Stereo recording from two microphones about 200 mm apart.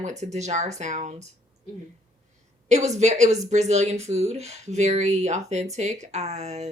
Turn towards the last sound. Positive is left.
turn(degrees=-35)  # may be behind; listen again after turning